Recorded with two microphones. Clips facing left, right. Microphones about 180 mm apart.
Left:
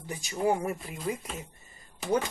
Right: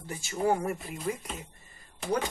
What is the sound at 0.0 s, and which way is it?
Speech, 15° left (ahead or behind).